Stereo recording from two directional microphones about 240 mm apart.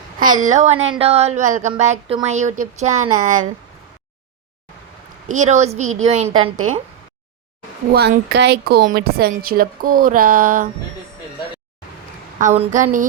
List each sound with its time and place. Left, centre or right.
0.2 s a woman's voice: right
5.3 s speech: right
7.9 s a woman's voice: right
12.4 s a woman's voice: right